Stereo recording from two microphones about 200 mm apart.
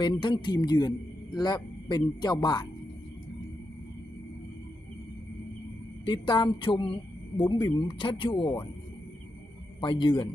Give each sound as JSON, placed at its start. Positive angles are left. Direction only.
{"t": 0.0, "sound": "speech", "side_deg": 25}
{"t": 6.1, "sound": "speech", "side_deg": 25}
{"t": 9.8, "sound": "speech", "side_deg": 25}